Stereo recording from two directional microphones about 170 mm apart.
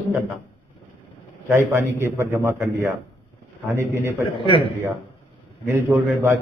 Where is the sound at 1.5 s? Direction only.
15° right (ahead or behind).